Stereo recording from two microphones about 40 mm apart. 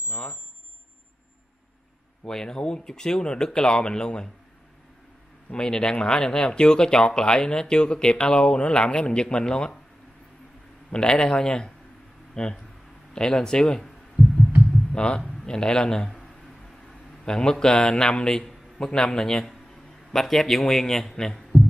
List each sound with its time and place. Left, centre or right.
0.1 s speech: left
2.2 s speech: centre
5.5 s speech: centre
10.9 s speech: left
13.1 s heart sounds: centre
14.6 s speech: left
17.2 s speech: centre